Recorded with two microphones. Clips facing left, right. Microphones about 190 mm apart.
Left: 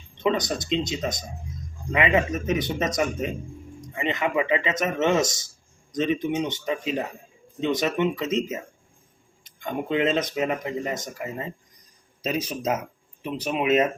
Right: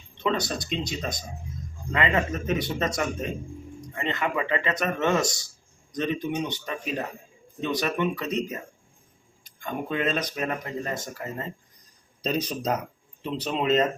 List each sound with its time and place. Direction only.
0.2 s speech: 20° left (ahead or behind)